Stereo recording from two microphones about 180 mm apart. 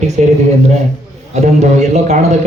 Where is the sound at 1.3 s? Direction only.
40° right (ahead or behind).